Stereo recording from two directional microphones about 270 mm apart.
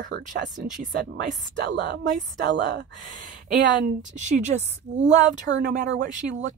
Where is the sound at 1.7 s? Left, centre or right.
Right.